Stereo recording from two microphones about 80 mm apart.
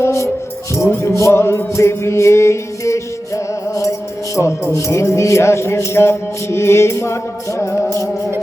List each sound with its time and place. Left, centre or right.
0.0 s music: left